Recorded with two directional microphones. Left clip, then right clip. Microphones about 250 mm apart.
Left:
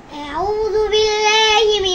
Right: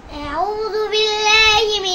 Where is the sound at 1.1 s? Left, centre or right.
Centre.